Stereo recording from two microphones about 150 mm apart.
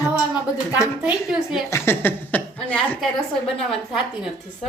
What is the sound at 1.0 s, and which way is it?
Speech, 5° right (ahead or behind).